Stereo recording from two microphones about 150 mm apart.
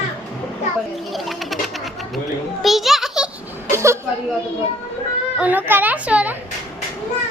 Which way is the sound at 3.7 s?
20° right (ahead or behind).